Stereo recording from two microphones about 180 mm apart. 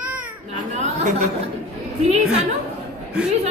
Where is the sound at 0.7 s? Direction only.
40° right (ahead or behind).